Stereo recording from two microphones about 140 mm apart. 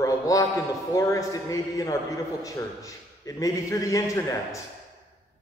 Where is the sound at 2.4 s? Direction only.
25° left (ahead or behind).